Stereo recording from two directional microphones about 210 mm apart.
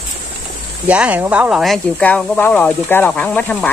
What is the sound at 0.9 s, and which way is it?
Speech, 5° right (ahead or behind).